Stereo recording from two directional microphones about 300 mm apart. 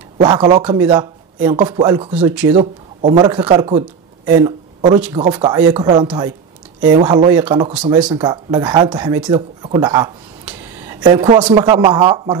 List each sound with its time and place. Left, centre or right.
0.2 s speech: centre